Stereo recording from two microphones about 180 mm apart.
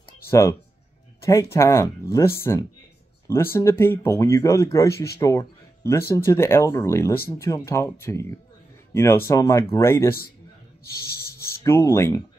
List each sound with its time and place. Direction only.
0.3 s speech: 15° left (ahead or behind)
11.6 s speech: 15° left (ahead or behind)